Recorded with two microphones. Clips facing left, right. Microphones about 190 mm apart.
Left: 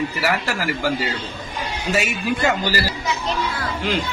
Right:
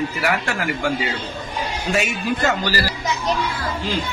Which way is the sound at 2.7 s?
15° left (ahead or behind).